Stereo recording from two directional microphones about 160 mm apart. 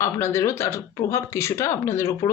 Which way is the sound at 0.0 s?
15° left (ahead or behind).